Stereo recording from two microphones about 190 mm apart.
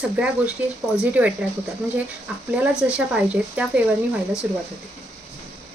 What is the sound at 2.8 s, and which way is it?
Speech, 5° right (ahead or behind).